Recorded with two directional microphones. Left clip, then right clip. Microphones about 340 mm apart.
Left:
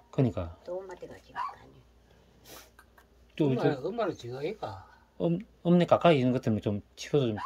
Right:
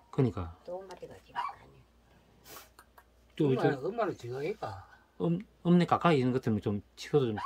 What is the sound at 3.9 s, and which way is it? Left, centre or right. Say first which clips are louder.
Speech: left 1 dB; centre.